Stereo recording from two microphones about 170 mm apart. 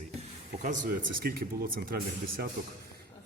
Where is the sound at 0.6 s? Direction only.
50° right (ahead or behind).